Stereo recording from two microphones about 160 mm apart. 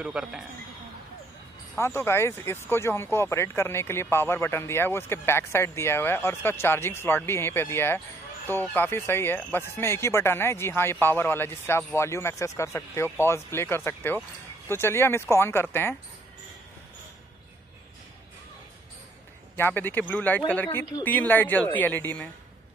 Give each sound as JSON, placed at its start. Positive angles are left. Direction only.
{"t": 0.0, "sound": "a man's voice", "side_deg": -5}
{"t": 1.8, "sound": "speech", "side_deg": 15}
{"t": 19.5, "sound": "speech", "side_deg": 15}